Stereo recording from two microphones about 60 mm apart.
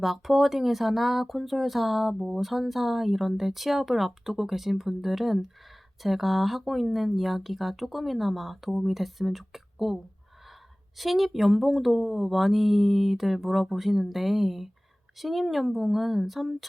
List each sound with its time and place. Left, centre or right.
0.0 s speech: centre